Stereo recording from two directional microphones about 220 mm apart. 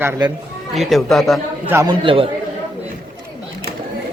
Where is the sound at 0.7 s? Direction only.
Centre (ahead or behind).